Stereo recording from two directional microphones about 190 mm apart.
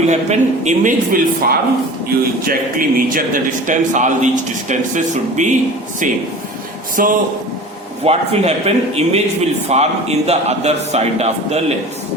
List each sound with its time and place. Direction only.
0.1 s a man's voice: 35° right (ahead or behind)
7.0 s a man's voice: 50° right (ahead or behind)
8.0 s speech: 35° right (ahead or behind)